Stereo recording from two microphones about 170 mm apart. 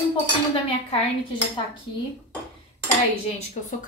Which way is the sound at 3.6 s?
45° left (ahead or behind).